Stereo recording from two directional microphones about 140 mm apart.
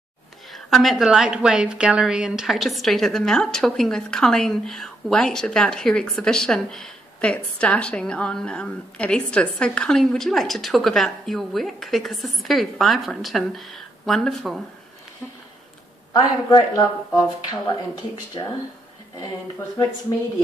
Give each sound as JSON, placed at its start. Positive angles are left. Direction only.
{"t": 0.5, "sound": "a woman's voice", "side_deg": 0}
{"t": 16.1, "sound": "speech", "side_deg": 30}
{"t": 20.1, "sound": "speech", "side_deg": 25}